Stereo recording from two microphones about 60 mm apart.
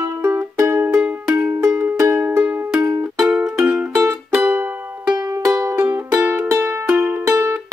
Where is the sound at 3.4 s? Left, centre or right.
Centre.